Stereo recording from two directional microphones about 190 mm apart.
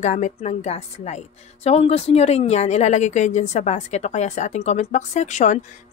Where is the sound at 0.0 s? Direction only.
35° left (ahead or behind).